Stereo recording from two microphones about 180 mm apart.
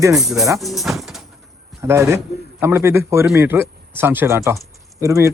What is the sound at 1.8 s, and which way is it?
Speech, 15° right (ahead or behind).